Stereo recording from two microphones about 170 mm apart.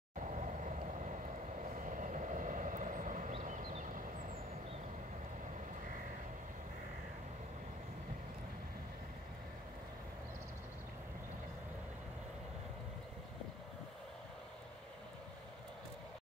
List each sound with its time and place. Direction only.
0.2 s vehicle: 45° right (ahead or behind)